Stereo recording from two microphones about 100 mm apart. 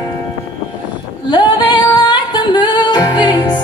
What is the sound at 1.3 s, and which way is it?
Music, 50° left (ahead or behind).